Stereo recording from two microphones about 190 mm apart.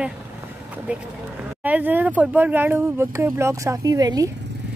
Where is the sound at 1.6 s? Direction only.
10° right (ahead or behind).